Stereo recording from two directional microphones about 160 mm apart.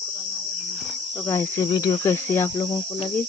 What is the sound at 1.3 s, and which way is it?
Cricket, 15° left (ahead or behind).